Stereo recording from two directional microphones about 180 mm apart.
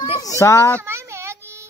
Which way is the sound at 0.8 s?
15° right (ahead or behind).